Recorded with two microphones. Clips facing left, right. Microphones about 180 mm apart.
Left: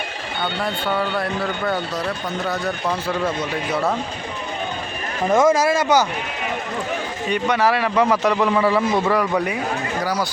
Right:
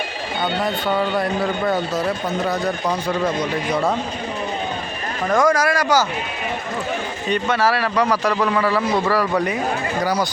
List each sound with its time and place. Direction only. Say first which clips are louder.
2.5 s speech: even; centre (ahead or behind)
5.3 s speech: left 1 dB; 20° left (ahead or behind)
7.3 s speech: even; 15° left (ahead or behind)
10.0 s speech: right 3 dB; 5° left (ahead or behind)